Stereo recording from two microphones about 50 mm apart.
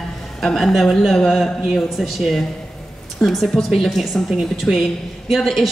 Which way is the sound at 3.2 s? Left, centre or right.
Left.